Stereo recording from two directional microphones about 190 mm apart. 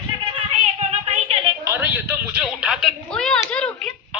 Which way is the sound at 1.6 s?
15° right (ahead or behind).